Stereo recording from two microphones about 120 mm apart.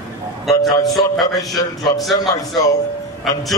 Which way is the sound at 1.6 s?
35° left (ahead or behind).